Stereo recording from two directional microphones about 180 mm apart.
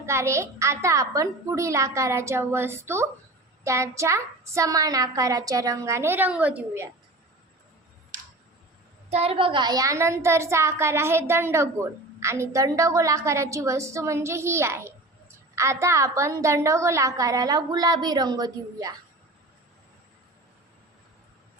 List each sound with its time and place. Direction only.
0.0 s a woman's voice: 15° right (ahead or behind)
9.0 s a woman's voice: 35° right (ahead or behind)